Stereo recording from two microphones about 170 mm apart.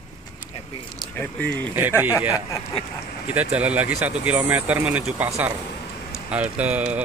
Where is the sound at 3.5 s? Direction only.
10° right (ahead or behind).